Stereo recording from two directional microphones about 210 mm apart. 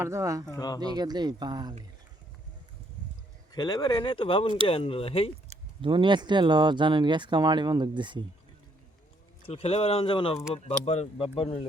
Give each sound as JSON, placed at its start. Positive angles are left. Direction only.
{"t": 0.0, "sound": "speech", "side_deg": -15}
{"t": 0.5, "sound": "speech", "side_deg": 20}
{"t": 0.9, "sound": "speech", "side_deg": -20}
{"t": 3.5, "sound": "speech", "side_deg": 20}
{"t": 5.5, "sound": "speech", "side_deg": -25}
{"t": 9.5, "sound": "speech", "side_deg": 30}